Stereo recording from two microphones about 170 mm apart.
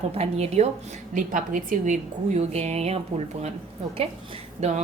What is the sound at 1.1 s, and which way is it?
Speech, 50° right (ahead or behind).